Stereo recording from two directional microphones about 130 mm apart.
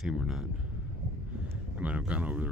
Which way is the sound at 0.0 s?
5° right (ahead or behind).